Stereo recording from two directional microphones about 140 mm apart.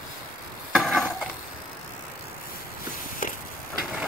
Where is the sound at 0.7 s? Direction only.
Centre (ahead or behind).